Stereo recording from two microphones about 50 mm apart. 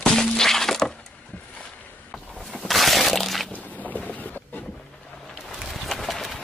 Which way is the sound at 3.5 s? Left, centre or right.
Left.